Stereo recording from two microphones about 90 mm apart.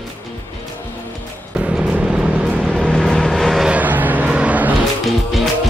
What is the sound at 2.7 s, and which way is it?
Vehicle, 5° left (ahead or behind).